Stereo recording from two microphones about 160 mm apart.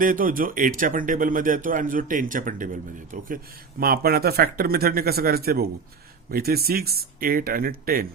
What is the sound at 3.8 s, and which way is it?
A man's voice, 70° right (ahead or behind).